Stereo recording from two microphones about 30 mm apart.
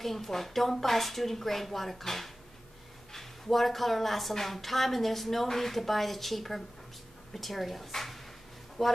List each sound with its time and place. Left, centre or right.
0.0 s a woman's voice: centre